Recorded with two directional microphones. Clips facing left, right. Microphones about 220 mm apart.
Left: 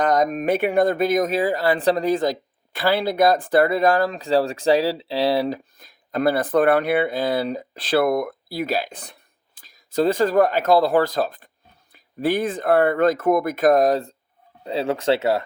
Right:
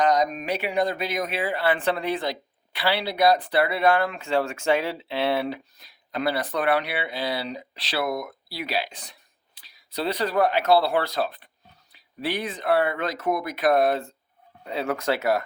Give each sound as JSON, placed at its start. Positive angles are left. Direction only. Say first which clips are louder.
{"t": 0.0, "sound": "speech", "louder": "left 3 dB", "side_deg": 55}